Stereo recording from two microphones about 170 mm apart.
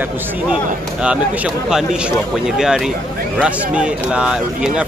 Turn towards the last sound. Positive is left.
turn(degrees=-5)  # may be behind; listen again after turning